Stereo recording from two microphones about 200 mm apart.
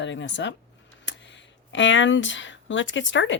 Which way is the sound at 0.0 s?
65° left (ahead or behind).